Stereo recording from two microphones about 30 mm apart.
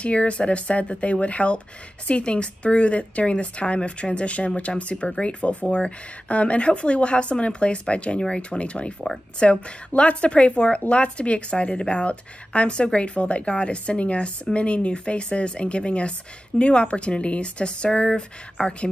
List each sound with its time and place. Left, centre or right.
0.0 s a woman's voice: left